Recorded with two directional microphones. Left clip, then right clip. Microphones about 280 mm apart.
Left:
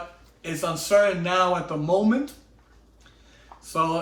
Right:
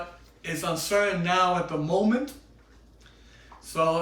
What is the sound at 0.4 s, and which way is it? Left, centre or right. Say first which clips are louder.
Speech: left 2 dB; centre.